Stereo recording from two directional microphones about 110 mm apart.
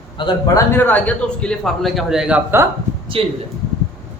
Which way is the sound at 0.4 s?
30° left (ahead or behind).